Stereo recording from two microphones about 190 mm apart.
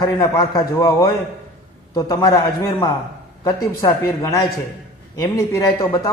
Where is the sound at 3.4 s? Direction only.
15° left (ahead or behind).